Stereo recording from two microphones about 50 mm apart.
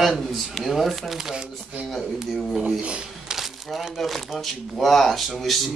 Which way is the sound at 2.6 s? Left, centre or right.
Right.